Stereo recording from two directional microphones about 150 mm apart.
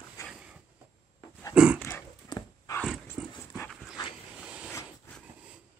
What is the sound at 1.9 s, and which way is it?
Dog, 25° left (ahead or behind).